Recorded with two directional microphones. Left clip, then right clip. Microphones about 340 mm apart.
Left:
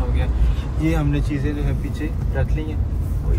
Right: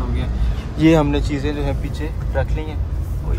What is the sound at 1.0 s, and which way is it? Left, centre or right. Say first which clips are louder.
Speech: right 5 dB; centre.